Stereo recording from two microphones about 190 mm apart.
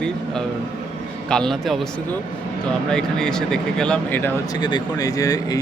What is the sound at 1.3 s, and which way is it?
Speech, 5° left (ahead or behind).